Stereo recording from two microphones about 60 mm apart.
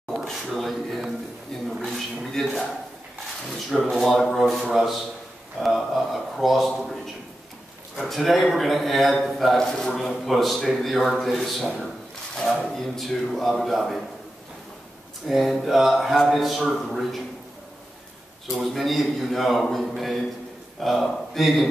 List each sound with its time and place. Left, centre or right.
0.3 s a sound: centre
3.9 s speech: centre
8.0 s speech: centre
12.4 s a sound: centre
12.6 s speech: centre
15.2 s speech: centre
18.5 s speech: centre